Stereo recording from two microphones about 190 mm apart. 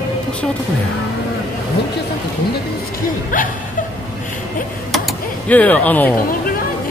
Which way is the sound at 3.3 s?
45° left (ahead or behind).